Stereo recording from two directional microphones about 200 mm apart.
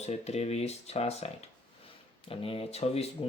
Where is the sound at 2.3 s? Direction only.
30° left (ahead or behind).